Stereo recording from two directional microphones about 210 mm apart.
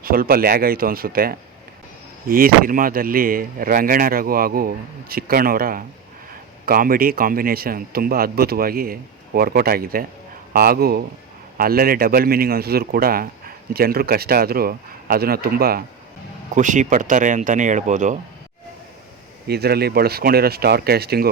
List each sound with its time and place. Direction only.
0.0 s speech: 45° right (ahead or behind)
19.5 s speech: 50° right (ahead or behind)